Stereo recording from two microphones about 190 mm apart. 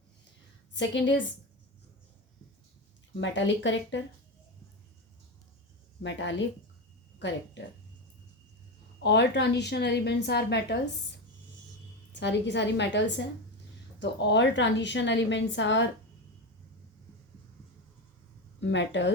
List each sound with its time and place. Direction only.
0.7 s a woman's voice: 70° left (ahead or behind)
3.2 s a woman's voice: 75° left (ahead or behind)
6.0 s a woman's voice: 75° left (ahead or behind)
9.0 s a woman's voice: 65° left (ahead or behind)
12.1 s a woman's voice: 70° left (ahead or behind)
18.6 s a woman's voice: 70° left (ahead or behind)